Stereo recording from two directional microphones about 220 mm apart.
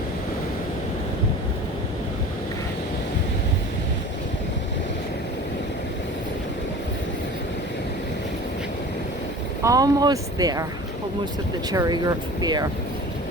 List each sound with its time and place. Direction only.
9.6 s speech: 15° right (ahead or behind)
11.7 s speech: 15° right (ahead or behind)